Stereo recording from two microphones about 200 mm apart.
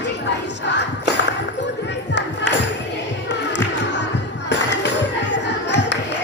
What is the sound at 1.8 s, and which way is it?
Music, 60° left (ahead or behind).